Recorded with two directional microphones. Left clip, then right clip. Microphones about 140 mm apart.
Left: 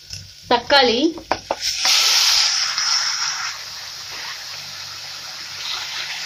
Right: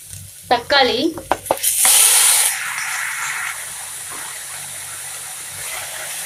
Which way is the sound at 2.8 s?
10° right (ahead or behind).